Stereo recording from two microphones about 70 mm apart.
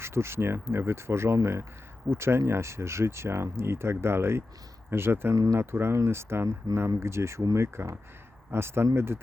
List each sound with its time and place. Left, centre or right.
0.0 s speech: right
5.3 s speech: right
5.5 s speech: right